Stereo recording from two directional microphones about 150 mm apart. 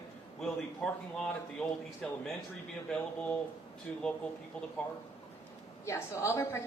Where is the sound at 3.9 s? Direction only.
5° left (ahead or behind).